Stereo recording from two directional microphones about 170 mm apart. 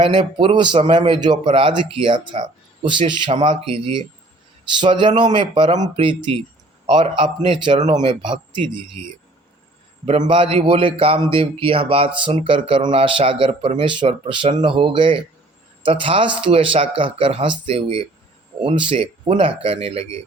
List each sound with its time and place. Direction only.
0.0 s a man's voice: 30° right (ahead or behind)
10.1 s a man's voice: 30° right (ahead or behind)